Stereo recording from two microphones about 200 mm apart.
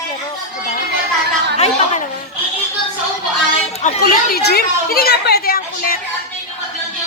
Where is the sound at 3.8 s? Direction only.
35° left (ahead or behind).